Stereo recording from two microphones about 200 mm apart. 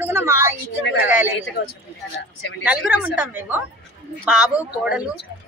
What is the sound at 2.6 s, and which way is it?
A woman's voice, 5° right (ahead or behind).